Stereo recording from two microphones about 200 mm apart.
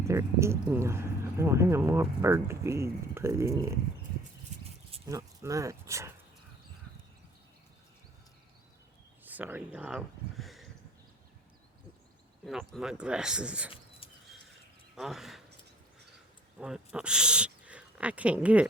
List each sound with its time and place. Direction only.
0.0 s speech: 15° right (ahead or behind)
5.0 s speech: 15° right (ahead or behind)
9.2 s speech: 10° right (ahead or behind)
12.5 s speech: centre (ahead or behind)
14.9 s speech: centre (ahead or behind)
16.6 s speech: 5° right (ahead or behind)